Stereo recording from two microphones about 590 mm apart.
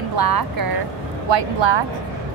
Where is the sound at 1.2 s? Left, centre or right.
Right.